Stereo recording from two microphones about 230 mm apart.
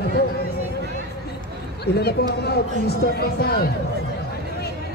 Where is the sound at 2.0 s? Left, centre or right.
Left.